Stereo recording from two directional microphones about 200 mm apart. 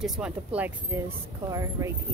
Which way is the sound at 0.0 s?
5° right (ahead or behind).